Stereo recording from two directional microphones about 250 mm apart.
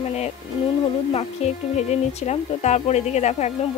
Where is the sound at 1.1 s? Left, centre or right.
Left.